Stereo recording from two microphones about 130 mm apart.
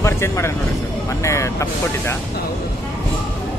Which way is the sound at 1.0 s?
25° left (ahead or behind).